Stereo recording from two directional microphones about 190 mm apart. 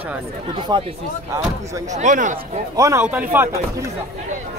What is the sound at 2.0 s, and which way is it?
Speech, 40° right (ahead or behind).